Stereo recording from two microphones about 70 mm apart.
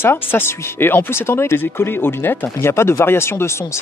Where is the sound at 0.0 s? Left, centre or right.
Left.